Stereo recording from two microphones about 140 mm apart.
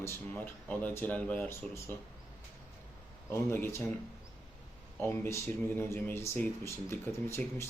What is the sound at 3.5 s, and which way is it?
Speech, 15° left (ahead or behind).